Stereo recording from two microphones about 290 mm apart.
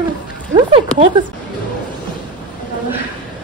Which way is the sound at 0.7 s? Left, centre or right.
Centre.